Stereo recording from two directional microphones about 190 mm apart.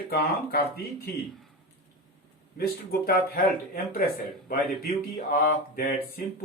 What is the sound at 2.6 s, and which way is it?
Speech, 50° left (ahead or behind).